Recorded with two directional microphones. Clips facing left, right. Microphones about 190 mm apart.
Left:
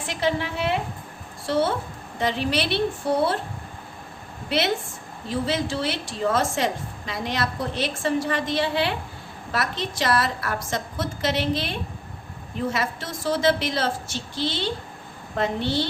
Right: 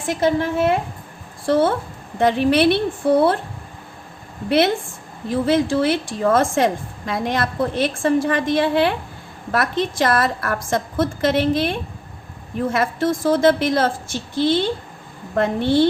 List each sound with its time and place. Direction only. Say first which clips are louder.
0.0 s a woman's voice: right 6 dB; 45° right (ahead or behind)
4.4 s a woman's voice: right 7 dB; 55° right (ahead or behind)